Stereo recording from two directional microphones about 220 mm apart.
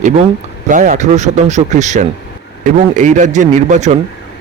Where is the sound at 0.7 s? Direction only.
35° right (ahead or behind).